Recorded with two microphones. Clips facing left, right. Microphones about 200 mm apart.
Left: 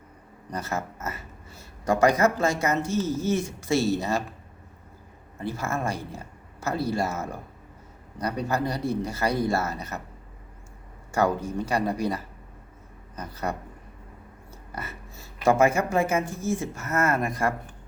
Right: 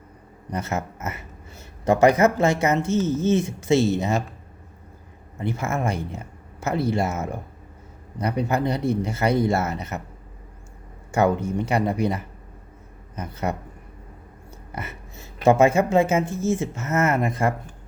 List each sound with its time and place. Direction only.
0.5 s speech: 20° right (ahead or behind)
5.4 s speech: 20° right (ahead or behind)
11.1 s speech: 20° right (ahead or behind)
14.7 s a woman's voice: 20° right (ahead or behind)